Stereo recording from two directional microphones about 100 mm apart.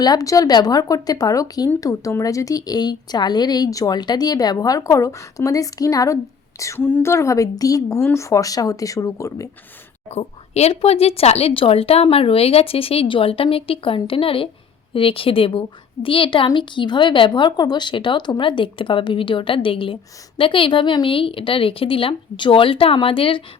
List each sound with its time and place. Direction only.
0.0 s speech: 40° left (ahead or behind)
10.1 s speech: 90° left; by 23.4 s 65° left (ahead or behind)